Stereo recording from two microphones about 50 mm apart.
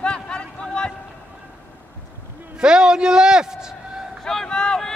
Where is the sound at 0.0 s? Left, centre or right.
Centre.